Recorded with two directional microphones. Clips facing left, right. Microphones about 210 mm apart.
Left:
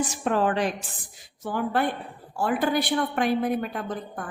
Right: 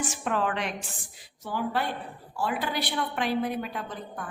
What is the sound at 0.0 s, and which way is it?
Speech, 35° left (ahead or behind).